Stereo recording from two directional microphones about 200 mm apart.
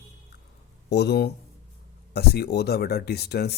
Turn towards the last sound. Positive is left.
turn(degrees=55)  # may be behind; listen again after turning